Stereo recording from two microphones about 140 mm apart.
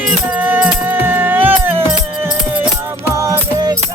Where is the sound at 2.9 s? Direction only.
20° right (ahead or behind).